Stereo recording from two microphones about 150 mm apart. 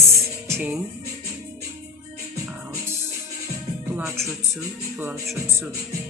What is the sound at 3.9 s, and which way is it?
Music, 15° right (ahead or behind).